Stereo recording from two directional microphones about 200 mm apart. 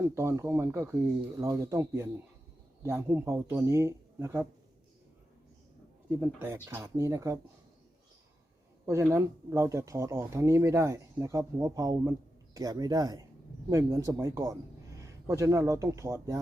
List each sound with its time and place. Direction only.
0.1 s speech: 15° right (ahead or behind)
6.1 s speech: 10° right (ahead or behind)
8.9 s a man's voice: 15° right (ahead or behind)